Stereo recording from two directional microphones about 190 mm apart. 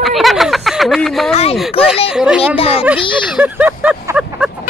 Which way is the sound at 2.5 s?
30° left (ahead or behind).